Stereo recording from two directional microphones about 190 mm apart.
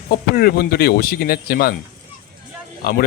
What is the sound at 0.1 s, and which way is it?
Speech, 55° left (ahead or behind).